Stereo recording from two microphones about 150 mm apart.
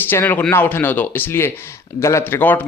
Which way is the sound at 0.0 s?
15° left (ahead or behind).